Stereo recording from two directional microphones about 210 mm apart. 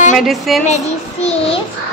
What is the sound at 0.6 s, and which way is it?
Child singing, 30° left (ahead or behind).